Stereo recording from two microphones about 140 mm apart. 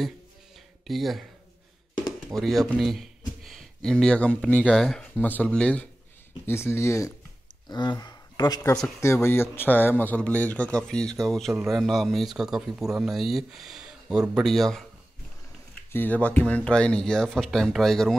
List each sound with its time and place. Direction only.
0.8 s speech: centre (ahead or behind)
2.3 s a man's voice: centre (ahead or behind); by 7.2 s 20° left (ahead or behind)
7.6 s speech: 30° left (ahead or behind)
9.0 s a man's voice: 20° left (ahead or behind); by 14.9 s centre (ahead or behind)
15.9 s speech: 15° left (ahead or behind)